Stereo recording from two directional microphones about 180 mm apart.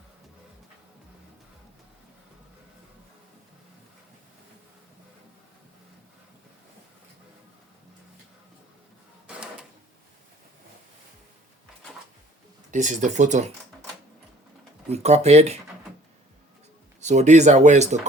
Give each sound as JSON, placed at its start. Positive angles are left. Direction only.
{"t": 9.2, "sound": "a sound", "side_deg": -5}
{"t": 12.7, "sound": "speech", "side_deg": -45}
{"t": 14.8, "sound": "speech", "side_deg": -35}
{"t": 17.0, "sound": "speech", "side_deg": -40}